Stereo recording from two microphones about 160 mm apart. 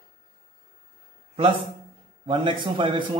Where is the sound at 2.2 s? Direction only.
30° right (ahead or behind).